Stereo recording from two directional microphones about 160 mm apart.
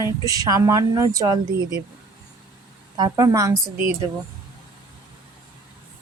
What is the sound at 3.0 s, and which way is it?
Speech, 20° right (ahead or behind).